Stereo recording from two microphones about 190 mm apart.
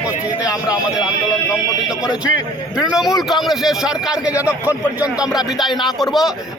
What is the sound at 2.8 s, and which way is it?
Speech, 5° right (ahead or behind).